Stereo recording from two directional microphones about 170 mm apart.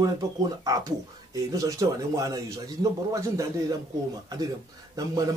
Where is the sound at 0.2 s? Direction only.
20° right (ahead or behind).